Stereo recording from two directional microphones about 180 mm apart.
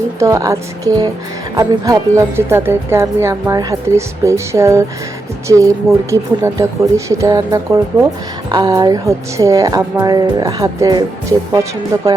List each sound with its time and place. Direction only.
0.2 s a woman's voice: 20° right (ahead or behind)